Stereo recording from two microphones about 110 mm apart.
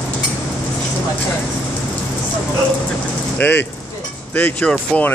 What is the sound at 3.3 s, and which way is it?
Speech, 15° left (ahead or behind).